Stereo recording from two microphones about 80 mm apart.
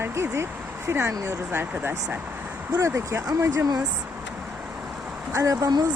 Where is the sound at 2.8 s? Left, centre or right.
Right.